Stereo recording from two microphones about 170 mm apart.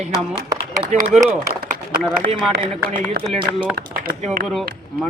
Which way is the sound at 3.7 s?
65° right (ahead or behind).